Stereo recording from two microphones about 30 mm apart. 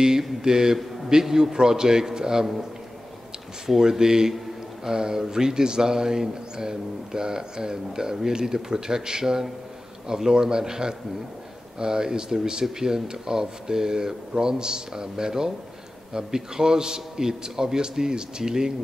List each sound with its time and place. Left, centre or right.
0.4 s a man's voice: centre
3.6 s a man's voice: centre